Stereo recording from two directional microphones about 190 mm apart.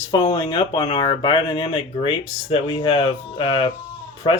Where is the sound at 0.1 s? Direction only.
20° left (ahead or behind).